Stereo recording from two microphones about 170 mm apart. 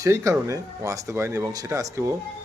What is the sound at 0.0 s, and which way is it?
Speech, 20° right (ahead or behind).